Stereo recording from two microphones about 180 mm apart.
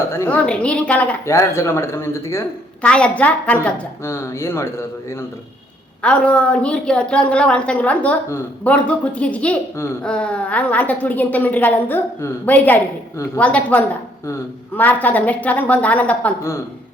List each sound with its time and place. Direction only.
0.1 s a woman's voice: 10° left (ahead or behind)